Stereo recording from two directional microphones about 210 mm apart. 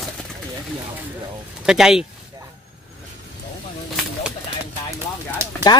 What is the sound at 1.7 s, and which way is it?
Speech, 5° right (ahead or behind).